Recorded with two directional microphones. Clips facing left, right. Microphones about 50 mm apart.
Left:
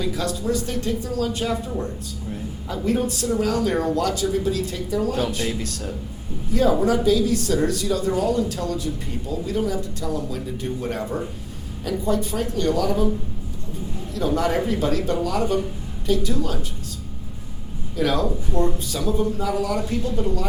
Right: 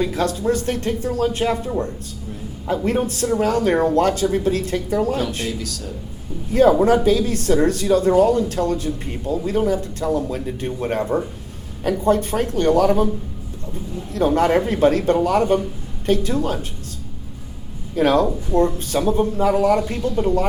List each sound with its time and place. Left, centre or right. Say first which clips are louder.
0.0 s speech: right 5 dB; right
5.5 s speech: right 1 dB; left
6.5 s speech: right 5 dB; right
14.1 s speech: right 6 dB; right
17.9 s speech: right 6 dB; right